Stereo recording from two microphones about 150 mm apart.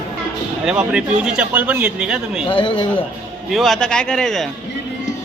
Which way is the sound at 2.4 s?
35° left (ahead or behind).